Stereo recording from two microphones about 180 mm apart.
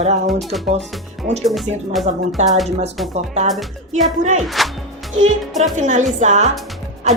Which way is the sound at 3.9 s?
40° right (ahead or behind).